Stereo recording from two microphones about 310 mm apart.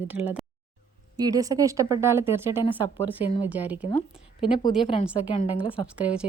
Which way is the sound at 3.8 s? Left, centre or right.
Centre.